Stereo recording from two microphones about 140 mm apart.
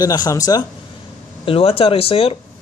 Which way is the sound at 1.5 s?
45° left (ahead or behind).